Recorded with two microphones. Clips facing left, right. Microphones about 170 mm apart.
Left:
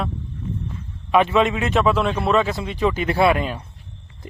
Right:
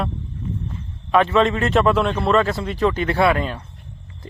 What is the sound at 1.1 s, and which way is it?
A man's voice, 10° left (ahead or behind).